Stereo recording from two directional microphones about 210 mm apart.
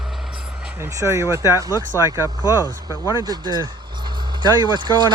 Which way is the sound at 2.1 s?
15° right (ahead or behind).